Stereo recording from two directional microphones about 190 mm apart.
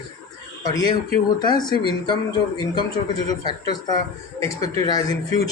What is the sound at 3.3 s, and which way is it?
Speech, 20° left (ahead or behind).